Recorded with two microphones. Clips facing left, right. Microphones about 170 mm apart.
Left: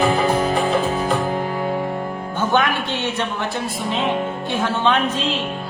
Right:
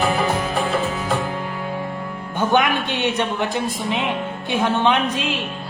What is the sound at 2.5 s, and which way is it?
Speech, 15° right (ahead or behind).